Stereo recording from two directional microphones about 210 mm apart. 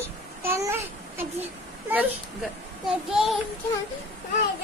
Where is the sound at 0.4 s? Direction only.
10° right (ahead or behind).